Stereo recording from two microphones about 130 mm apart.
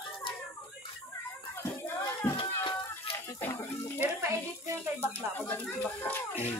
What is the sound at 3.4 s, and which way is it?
Speech, 15° left (ahead or behind).